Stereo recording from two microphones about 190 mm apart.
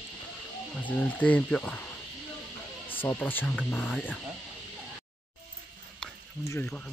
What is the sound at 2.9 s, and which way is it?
Speech, 10° left (ahead or behind).